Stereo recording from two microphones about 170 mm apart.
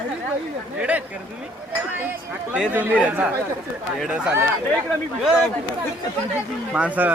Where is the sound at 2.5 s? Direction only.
10° right (ahead or behind).